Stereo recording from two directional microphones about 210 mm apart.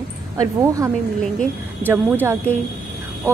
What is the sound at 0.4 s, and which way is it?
A woman's voice, 15° right (ahead or behind).